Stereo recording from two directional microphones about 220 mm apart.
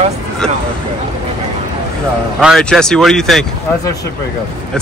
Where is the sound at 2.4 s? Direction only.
Centre (ahead or behind).